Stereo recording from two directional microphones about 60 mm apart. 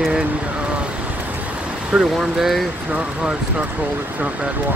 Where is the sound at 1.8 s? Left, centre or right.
Centre.